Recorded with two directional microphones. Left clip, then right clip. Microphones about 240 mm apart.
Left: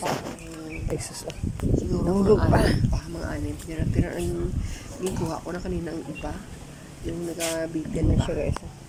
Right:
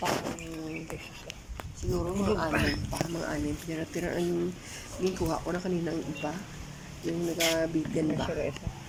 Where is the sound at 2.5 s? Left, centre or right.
Left.